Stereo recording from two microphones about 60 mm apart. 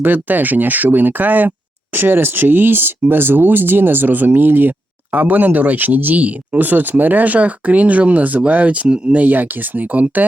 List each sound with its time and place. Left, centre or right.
0.0 s speech: right